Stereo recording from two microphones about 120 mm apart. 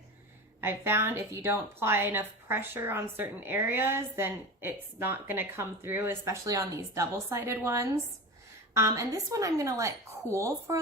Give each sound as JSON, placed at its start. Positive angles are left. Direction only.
{"t": 0.6, "sound": "a woman's voice", "side_deg": -20}